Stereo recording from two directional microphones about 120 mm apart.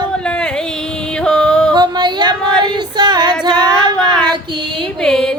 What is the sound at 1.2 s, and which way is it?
Music, 5° left (ahead or behind).